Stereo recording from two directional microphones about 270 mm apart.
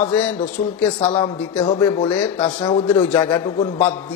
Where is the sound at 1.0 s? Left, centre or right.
Centre.